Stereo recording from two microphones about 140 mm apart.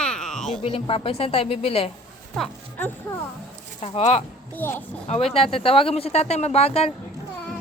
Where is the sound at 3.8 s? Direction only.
45° left (ahead or behind).